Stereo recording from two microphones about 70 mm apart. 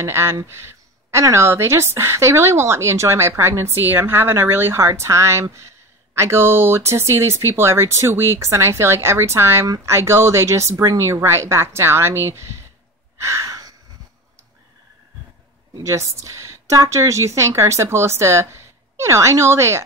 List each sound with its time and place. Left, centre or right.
0.0 s a woman's voice: right
13.2 s a sound: right
15.8 s speech: right